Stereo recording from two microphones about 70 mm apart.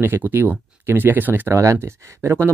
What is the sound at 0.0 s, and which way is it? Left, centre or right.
Speech, right.